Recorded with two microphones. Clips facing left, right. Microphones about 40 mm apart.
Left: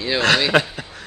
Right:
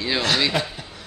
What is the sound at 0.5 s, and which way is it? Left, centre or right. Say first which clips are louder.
Speech: left 7 dB; left.